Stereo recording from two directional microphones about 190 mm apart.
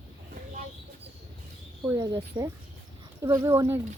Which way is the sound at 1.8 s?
15° right (ahead or behind).